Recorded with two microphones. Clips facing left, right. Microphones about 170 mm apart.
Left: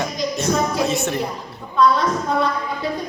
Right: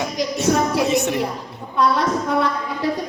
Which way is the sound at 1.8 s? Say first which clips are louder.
Left 1 dB; 70° right (ahead or behind).